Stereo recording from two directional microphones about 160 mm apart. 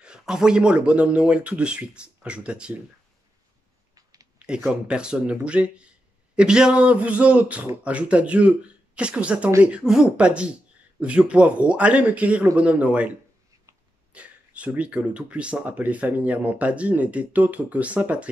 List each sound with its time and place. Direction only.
0.0 s speech: 5° right (ahead or behind)
3.9 s clicking: 20° right (ahead or behind)
4.4 s speech: 5° right (ahead or behind)
14.1 s speech: 10° right (ahead or behind)